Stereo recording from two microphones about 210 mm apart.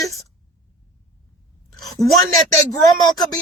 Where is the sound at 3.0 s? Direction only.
20° left (ahead or behind).